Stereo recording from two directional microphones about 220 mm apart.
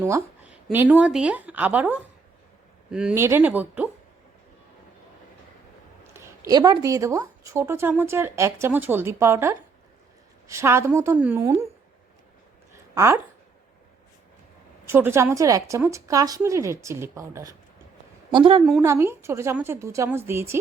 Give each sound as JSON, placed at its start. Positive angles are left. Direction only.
{"t": 0.7, "sound": "speech", "side_deg": -10}
{"t": 6.1, "sound": "speech", "side_deg": -15}
{"t": 12.9, "sound": "speech", "side_deg": -15}
{"t": 14.8, "sound": "speech", "side_deg": -10}
{"t": 18.3, "sound": "a woman's voice", "side_deg": -25}
{"t": 18.8, "sound": "speech", "side_deg": -10}